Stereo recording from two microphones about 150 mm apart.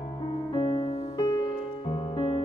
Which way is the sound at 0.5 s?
40° left (ahead or behind).